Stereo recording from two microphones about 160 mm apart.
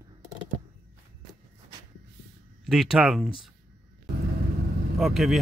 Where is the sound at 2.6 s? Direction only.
Centre (ahead or behind).